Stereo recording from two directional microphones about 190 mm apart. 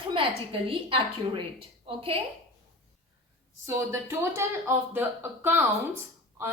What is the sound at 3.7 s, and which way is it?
A woman's voice, 15° right (ahead or behind).